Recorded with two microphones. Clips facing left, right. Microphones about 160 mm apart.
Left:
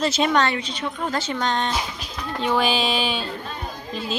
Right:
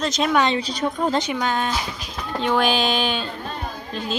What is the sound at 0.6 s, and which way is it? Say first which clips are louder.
Speech: right 5 dB; 40° right (ahead or behind).